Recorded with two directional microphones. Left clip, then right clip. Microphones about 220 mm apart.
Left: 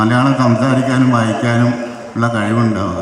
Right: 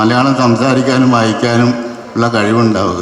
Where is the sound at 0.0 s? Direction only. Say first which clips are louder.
Right 3 dB; 50° right (ahead or behind).